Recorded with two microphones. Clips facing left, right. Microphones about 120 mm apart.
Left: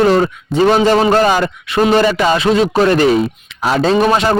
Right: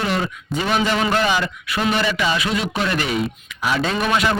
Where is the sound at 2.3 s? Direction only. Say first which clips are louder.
Left 10 dB; 35° left (ahead or behind).